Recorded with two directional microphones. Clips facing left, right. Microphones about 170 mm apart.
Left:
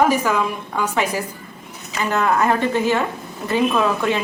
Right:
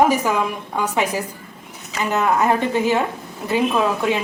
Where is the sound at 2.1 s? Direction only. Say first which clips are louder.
Even; 15° right (ahead or behind).